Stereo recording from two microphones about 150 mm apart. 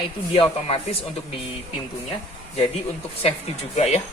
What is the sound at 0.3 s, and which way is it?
Speech, 35° left (ahead or behind).